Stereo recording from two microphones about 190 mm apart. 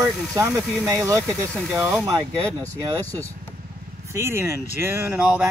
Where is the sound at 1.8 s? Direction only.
5° right (ahead or behind).